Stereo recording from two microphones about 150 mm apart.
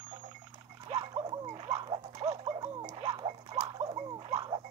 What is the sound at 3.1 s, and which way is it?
Pig, 30° right (ahead or behind).